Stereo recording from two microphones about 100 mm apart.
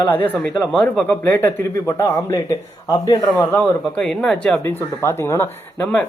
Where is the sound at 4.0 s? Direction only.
5° left (ahead or behind).